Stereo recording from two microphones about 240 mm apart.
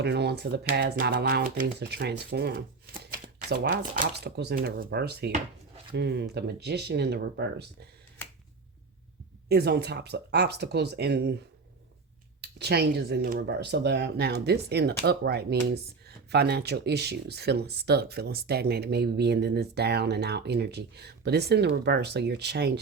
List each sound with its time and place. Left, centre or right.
0.0 s speech: right
9.5 s speech: right
12.4 s speech: right